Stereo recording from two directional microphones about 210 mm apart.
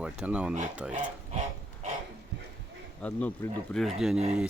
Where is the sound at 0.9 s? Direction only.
35° right (ahead or behind).